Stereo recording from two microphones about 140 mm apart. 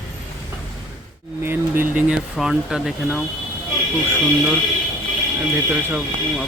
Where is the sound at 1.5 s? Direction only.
15° right (ahead or behind).